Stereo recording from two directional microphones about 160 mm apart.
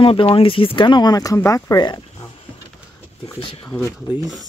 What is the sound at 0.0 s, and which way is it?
Speech, 35° left (ahead or behind).